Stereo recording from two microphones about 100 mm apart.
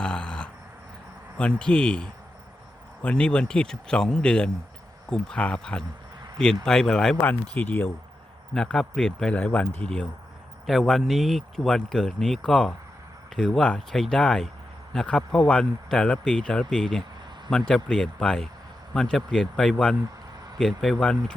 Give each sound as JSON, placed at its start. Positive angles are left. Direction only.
{"t": 0.0, "sound": "a sound", "side_deg": 10}
{"t": 1.4, "sound": "speech", "side_deg": 10}
{"t": 7.5, "sound": "speech", "side_deg": 20}
{"t": 8.5, "sound": "speech", "side_deg": 5}